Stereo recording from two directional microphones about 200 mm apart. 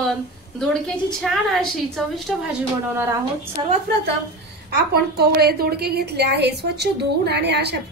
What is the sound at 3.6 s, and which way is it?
Speech, 25° right (ahead or behind).